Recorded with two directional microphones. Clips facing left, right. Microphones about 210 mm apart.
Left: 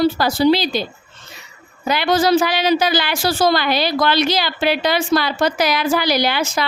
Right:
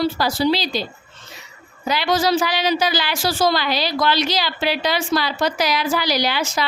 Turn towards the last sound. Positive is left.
turn(degrees=55)  # may be behind; listen again after turning